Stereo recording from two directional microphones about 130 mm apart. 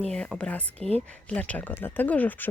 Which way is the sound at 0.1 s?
5° left (ahead or behind).